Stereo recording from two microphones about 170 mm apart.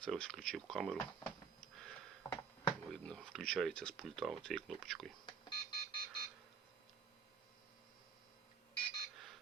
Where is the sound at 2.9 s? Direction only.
5° left (ahead or behind).